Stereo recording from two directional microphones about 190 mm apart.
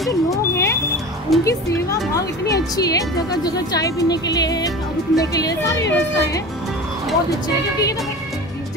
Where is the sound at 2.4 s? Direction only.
20° left (ahead or behind).